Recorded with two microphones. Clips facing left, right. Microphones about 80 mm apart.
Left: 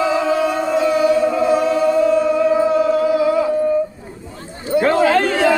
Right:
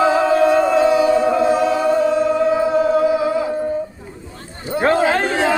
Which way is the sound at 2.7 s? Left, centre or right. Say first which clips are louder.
Even; right.